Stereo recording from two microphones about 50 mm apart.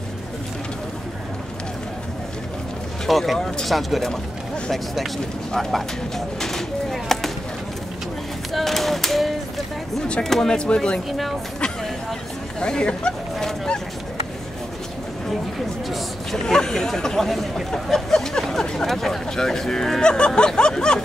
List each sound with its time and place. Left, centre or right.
3.1 s speech: centre
5.5 s a sound: centre
8.5 s clapping: centre
10.2 s speech: centre
10.6 s speech: centre
11.1 s speech: centre
12.5 s speech: centre
15.9 s speech: centre